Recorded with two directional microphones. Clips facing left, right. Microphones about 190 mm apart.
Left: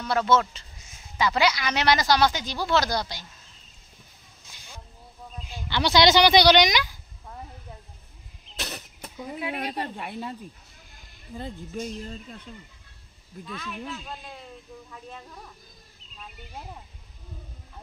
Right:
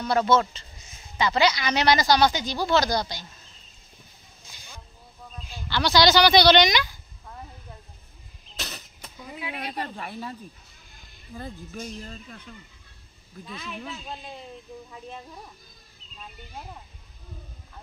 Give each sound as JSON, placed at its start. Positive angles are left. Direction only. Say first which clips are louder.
{"t": 0.0, "sound": "speech", "louder": "right 1 dB", "side_deg": 0}
{"t": 5.5, "sound": "speech", "louder": "even", "side_deg": 20}
{"t": 8.5, "sound": "a sound", "louder": "left 3 dB", "side_deg": 55}
{"t": 9.8, "sound": "speech", "louder": "left 1 dB", "side_deg": 20}
{"t": 11.3, "sound": "speech", "louder": "left 3 dB", "side_deg": 20}
{"t": 14.9, "sound": "speech", "louder": "right 2 dB", "side_deg": -15}